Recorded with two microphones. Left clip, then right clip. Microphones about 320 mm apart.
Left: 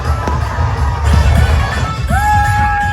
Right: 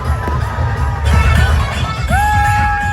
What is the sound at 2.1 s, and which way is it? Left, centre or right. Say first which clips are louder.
Music: even; centre.